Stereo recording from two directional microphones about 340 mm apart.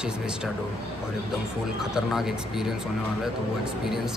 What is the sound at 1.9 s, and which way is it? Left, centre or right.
Speech, centre.